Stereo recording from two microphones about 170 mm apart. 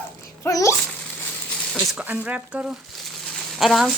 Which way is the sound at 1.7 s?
Centre (ahead or behind).